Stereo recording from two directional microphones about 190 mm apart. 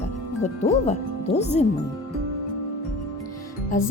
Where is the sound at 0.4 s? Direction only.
35° left (ahead or behind).